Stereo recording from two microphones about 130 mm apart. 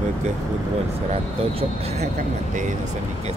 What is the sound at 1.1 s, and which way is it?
Speech, 55° right (ahead or behind).